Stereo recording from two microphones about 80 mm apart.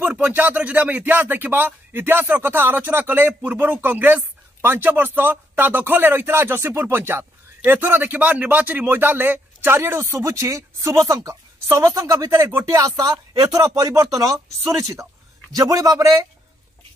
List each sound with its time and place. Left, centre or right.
0.0 s speech: centre; by 16.3 s right